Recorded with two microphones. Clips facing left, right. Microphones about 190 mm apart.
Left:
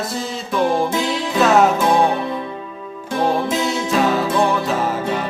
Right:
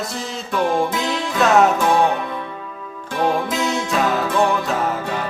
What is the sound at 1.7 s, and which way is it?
Music, 30° left (ahead or behind).